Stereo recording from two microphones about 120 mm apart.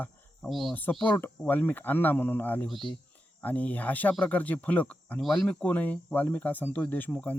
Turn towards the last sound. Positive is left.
turn(degrees=15)  # may be behind; listen again after turning